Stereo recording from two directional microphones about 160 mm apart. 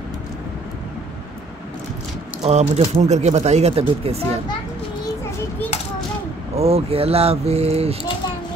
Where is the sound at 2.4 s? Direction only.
45° right (ahead or behind).